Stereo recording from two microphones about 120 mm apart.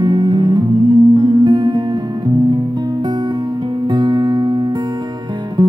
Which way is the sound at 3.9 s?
40° right (ahead or behind).